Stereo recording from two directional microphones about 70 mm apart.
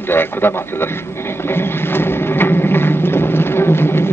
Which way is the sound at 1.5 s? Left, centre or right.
Left.